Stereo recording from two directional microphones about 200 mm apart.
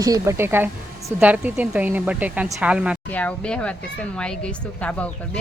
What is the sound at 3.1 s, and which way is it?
A woman's voice, 5° left (ahead or behind).